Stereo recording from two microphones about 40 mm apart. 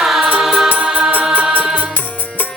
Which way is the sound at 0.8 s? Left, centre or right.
Right.